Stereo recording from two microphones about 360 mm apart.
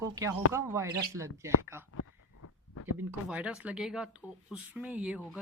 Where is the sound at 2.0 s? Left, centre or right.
Left.